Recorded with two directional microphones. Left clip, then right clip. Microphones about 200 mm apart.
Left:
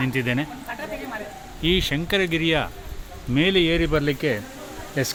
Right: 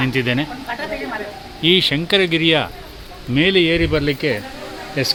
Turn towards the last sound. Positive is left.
turn(degrees=20)  # may be behind; listen again after turning